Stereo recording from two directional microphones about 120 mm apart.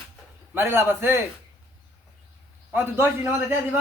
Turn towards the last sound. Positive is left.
turn(degrees=-20)  # may be behind; listen again after turning